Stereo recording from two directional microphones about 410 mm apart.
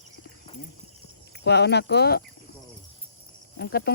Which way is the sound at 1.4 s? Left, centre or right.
Left.